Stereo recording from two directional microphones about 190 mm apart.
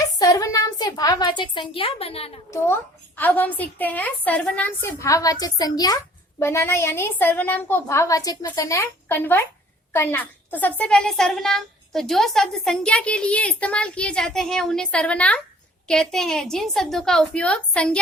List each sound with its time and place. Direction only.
0.2 s a woman's voice: 15° left (ahead or behind)
2.5 s a woman's voice: 10° left (ahead or behind)